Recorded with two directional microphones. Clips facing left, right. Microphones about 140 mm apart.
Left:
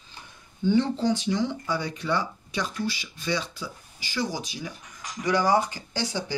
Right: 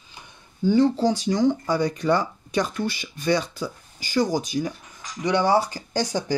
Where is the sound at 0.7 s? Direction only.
40° right (ahead or behind).